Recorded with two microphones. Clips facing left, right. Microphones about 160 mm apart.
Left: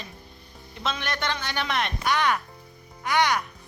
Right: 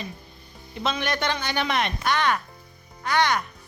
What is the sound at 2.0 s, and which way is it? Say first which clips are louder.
Speech: left 2 dB; 10° left (ahead or behind).